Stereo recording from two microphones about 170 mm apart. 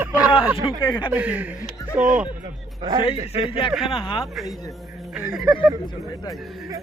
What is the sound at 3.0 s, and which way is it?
Speech, 35° left (ahead or behind).